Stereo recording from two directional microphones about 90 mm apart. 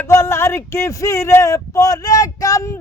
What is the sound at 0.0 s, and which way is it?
Speech, 30° left (ahead or behind).